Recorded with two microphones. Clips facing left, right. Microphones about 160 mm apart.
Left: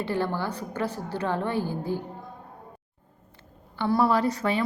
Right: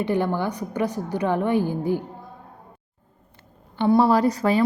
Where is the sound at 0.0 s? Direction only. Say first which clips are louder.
Right 5 dB; 15° right (ahead or behind).